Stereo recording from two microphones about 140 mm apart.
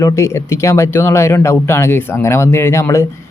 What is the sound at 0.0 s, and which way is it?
Speech, 20° left (ahead or behind).